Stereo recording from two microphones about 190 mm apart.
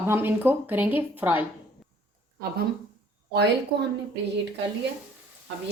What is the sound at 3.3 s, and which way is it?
Speech, 60° right (ahead or behind).